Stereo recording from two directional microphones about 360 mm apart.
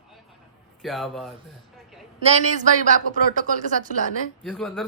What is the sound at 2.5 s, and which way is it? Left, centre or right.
Speech, right.